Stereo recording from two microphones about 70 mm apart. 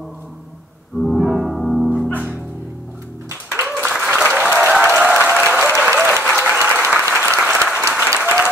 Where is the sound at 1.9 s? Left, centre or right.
Left.